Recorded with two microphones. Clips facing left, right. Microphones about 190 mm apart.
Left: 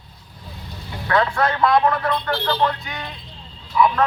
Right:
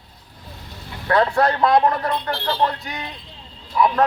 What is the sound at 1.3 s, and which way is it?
A man's voice, 35° right (ahead or behind).